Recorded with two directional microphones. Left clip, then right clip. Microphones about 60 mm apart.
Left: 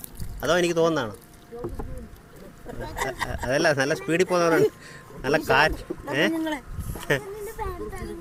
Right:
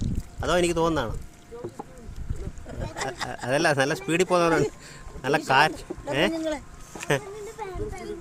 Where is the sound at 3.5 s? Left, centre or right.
Right.